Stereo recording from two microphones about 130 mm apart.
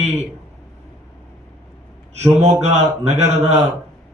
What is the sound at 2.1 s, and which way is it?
A man's voice, 55° right (ahead or behind).